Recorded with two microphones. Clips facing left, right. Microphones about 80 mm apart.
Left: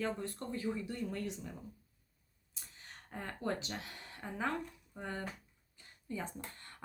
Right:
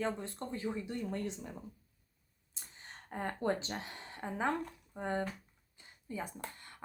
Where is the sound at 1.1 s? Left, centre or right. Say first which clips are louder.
Right 2 dB; right.